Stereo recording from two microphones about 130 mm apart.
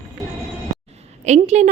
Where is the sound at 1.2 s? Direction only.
65° right (ahead or behind).